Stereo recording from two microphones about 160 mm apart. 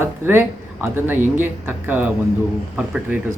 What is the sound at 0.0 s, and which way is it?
Speech, 15° right (ahead or behind).